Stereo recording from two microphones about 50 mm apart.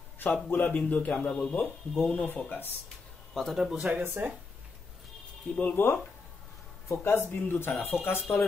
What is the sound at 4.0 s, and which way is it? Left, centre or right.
Speech, right.